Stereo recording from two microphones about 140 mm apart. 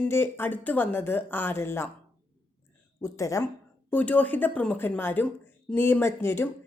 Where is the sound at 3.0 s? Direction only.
25° left (ahead or behind).